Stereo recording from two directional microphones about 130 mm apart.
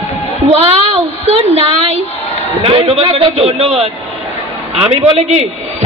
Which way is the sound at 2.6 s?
45° right (ahead or behind).